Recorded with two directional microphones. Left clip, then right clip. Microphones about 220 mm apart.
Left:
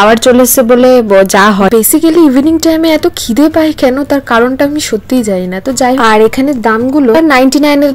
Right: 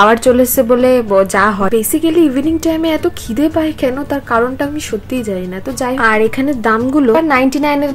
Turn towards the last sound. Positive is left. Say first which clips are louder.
# left 6 dB
turn(degrees=35)  # may be behind; listen again after turning